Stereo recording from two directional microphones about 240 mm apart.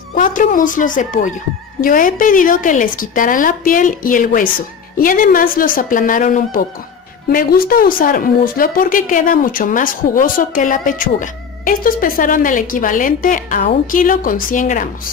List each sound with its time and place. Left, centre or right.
0.1 s speech: left